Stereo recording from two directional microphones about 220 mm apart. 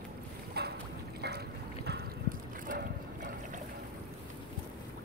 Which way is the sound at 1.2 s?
45° right (ahead or behind).